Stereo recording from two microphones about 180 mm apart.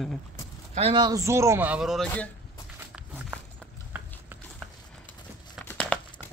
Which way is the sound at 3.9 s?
5° right (ahead or behind).